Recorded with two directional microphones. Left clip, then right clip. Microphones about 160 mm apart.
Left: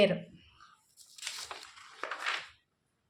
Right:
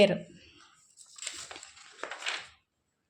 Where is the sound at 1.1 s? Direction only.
5° right (ahead or behind).